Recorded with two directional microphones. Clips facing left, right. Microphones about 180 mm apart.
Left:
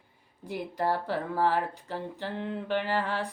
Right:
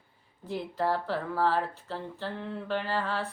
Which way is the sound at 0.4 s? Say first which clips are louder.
Even; 15° left (ahead or behind).